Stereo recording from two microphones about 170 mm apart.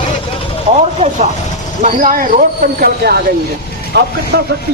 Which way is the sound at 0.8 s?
40° right (ahead or behind).